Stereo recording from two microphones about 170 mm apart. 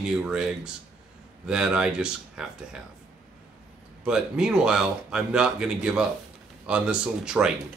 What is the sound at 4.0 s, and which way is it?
Speech, 5° right (ahead or behind).